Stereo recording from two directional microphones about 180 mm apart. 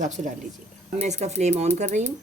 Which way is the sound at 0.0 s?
40° right (ahead or behind).